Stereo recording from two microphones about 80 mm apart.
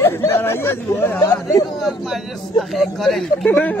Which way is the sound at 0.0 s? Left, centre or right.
Left.